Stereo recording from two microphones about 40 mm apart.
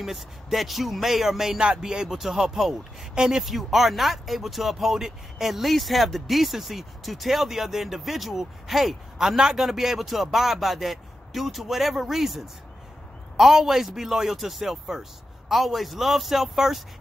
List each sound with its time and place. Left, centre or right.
0.0 s speech: centre
1.6 s a man's voice: centre
3.4 s a man's voice: centre